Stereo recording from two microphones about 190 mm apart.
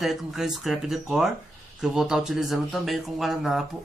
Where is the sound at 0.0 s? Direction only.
Centre (ahead or behind).